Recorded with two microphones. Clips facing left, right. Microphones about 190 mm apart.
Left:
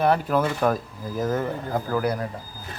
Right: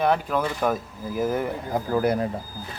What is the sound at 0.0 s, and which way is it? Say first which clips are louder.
Speech: left 2 dB; 5° left (ahead or behind).